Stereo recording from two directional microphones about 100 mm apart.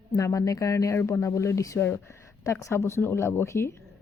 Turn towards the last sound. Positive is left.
turn(degrees=25)  # may be behind; listen again after turning